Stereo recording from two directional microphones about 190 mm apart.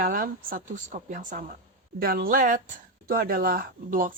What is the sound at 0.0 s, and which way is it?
Speech, 45° right (ahead or behind).